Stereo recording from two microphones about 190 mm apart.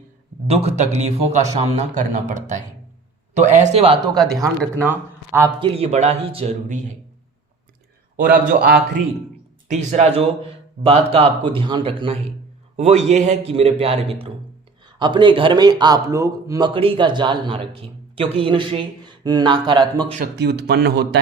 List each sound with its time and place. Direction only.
0.4 s a man's voice: 35° right (ahead or behind)
4.8 s speech: 10° right (ahead or behind)
5.5 s a man's voice: 30° right (ahead or behind)
8.1 s a man's voice: 50° right (ahead or behind)
9.6 s a man's voice: 35° right (ahead or behind)
20.4 s speech: 60° right (ahead or behind)